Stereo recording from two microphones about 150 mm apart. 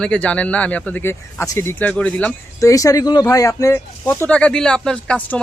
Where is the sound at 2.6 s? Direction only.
20° left (ahead or behind); by 5.4 s 5° left (ahead or behind).